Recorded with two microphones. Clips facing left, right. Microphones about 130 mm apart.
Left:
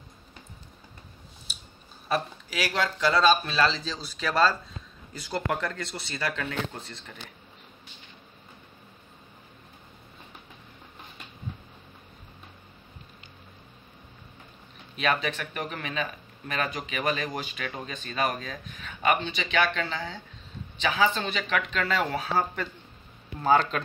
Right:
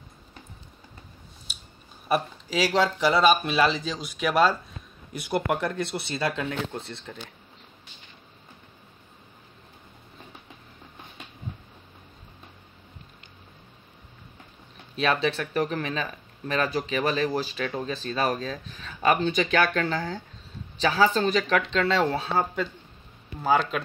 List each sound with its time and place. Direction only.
2.7 s speech: 25° right (ahead or behind)
3.1 s speech: 15° right (ahead or behind)
15.0 s speech: 30° right (ahead or behind)
23.4 s speech: 5° right (ahead or behind)